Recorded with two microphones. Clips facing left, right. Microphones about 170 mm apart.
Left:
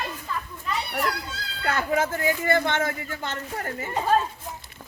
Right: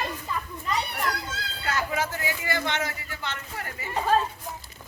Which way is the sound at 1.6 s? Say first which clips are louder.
Left 4 dB; 50° left (ahead or behind).